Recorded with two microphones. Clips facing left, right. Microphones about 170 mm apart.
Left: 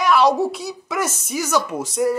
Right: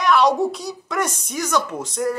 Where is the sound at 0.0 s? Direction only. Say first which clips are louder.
Left 1 dB; centre (ahead or behind).